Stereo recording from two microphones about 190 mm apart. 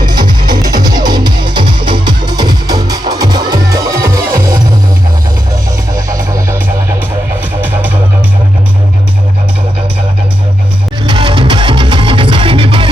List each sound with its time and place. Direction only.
0.0 s music: 20° right (ahead or behind)
7.6 s music: 10° right (ahead or behind)
11.0 s music: 25° right (ahead or behind)